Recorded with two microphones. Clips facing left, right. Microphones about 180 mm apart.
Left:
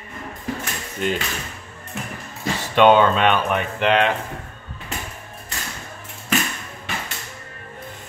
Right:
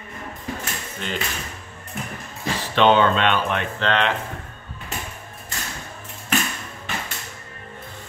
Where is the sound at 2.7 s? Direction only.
10° left (ahead or behind).